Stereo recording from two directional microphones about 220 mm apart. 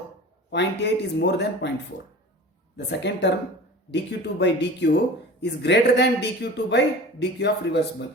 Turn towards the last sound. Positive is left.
turn(degrees=50)  # may be behind; listen again after turning